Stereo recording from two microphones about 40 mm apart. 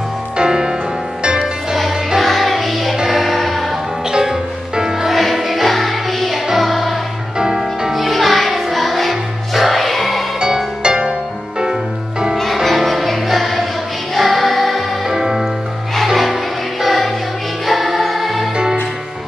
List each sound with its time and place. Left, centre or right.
0.4 s music: centre
1.8 s music: centre
4.1 s music: centre
5.1 s music: centre
7.3 s music: centre
7.9 s music: centre
10.4 s music: right
12.6 s music: centre
15.0 s music: centre
16.8 s music: centre